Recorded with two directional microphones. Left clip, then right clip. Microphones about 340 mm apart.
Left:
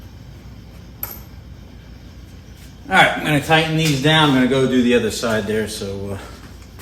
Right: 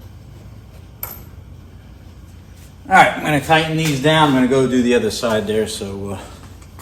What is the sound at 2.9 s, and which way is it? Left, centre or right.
A man's voice, centre.